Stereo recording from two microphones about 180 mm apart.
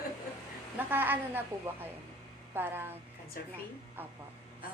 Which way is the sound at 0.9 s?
10° right (ahead or behind).